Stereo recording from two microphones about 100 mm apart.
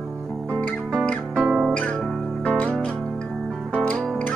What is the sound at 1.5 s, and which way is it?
Music, 10° right (ahead or behind).